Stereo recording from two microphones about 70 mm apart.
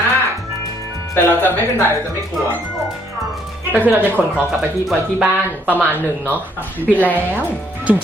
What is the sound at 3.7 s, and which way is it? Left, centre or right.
Speech, left.